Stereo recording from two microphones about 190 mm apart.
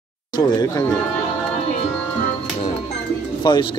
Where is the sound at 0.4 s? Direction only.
20° left (ahead or behind).